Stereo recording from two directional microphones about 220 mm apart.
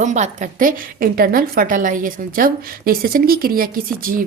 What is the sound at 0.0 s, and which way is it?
A woman's voice, 35° right (ahead or behind).